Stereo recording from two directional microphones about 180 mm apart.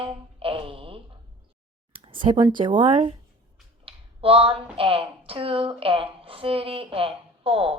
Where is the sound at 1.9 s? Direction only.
30° right (ahead or behind).